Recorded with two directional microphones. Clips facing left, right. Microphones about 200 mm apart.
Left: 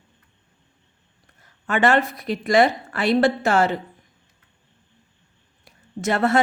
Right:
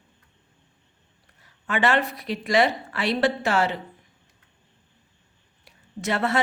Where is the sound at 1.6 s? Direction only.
45° left (ahead or behind).